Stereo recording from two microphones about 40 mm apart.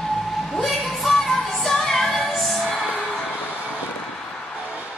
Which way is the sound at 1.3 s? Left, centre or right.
Centre.